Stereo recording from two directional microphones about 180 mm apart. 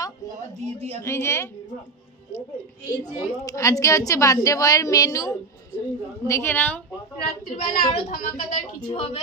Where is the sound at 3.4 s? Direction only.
20° left (ahead or behind).